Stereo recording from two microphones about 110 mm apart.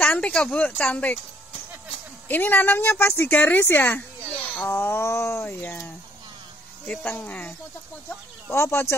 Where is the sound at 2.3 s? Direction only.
15° left (ahead or behind).